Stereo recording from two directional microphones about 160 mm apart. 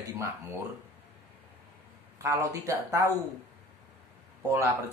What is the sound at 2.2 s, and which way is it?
Speech, 20° right (ahead or behind).